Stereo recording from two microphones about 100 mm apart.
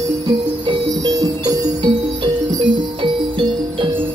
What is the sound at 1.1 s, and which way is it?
Music, 40° right (ahead or behind).